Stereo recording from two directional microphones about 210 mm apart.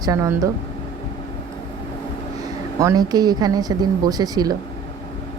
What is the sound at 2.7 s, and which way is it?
Speech, 15° right (ahead or behind).